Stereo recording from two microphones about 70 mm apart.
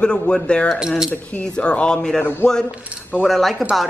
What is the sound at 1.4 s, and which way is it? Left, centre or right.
Speech, centre.